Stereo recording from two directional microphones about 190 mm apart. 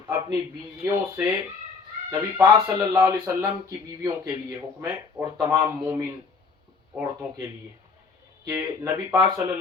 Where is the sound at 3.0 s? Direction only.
10° right (ahead or behind).